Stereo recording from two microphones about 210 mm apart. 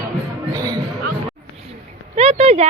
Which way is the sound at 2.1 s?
30° right (ahead or behind).